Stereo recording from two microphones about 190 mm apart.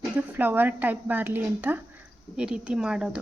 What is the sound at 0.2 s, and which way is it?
A woman's voice, 10° right (ahead or behind).